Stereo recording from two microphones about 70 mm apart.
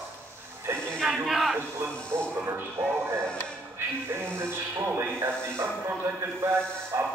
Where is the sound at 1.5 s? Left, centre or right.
Right.